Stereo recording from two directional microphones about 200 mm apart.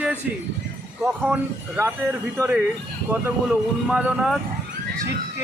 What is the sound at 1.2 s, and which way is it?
Speech, 10° right (ahead or behind).